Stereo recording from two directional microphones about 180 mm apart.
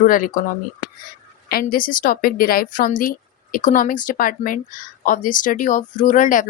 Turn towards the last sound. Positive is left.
turn(degrees=45)  # may be behind; listen again after turning